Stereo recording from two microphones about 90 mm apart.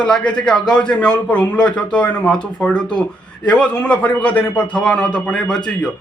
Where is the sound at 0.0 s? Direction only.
10° left (ahead or behind).